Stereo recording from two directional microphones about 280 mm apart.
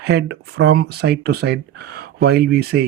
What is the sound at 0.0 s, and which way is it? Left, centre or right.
Speech, right.